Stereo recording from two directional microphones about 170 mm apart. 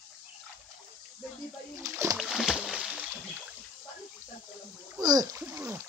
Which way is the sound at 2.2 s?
Centre (ahead or behind).